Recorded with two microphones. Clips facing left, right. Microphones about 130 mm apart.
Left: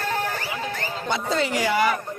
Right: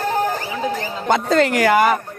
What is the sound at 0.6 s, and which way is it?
Speech, 50° right (ahead or behind).